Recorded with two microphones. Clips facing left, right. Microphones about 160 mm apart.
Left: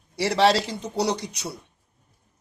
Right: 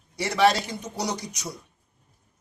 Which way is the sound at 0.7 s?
65° left (ahead or behind).